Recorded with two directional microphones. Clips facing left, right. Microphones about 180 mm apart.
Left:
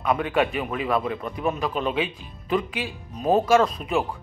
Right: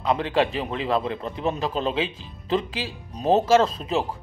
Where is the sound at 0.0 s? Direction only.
30° right (ahead or behind).